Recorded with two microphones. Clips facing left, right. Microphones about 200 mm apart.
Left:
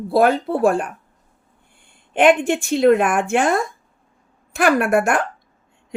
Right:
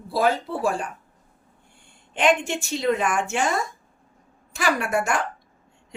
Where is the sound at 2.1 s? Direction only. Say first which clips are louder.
Left 7 dB; 55° left (ahead or behind).